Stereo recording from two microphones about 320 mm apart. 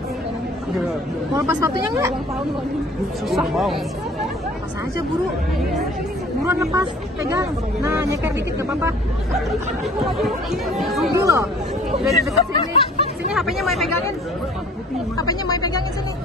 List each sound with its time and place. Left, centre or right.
1.3 s speech: centre
3.3 s speech: centre
6.4 s speech: centre
12.1 s speech: centre
13.3 s speech: centre
15.1 s speech: centre